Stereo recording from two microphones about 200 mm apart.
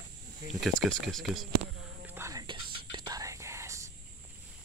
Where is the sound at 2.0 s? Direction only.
15° right (ahead or behind).